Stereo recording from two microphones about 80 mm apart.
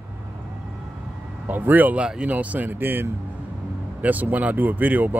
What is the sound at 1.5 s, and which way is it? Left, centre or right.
Speech, right.